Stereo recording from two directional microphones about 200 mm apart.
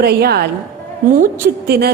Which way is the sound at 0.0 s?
50° right (ahead or behind).